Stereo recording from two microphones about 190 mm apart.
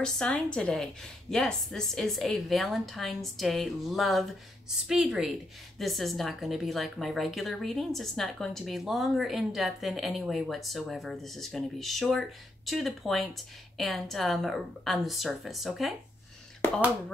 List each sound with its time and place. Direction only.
0.0 s speech: 5° left (ahead or behind)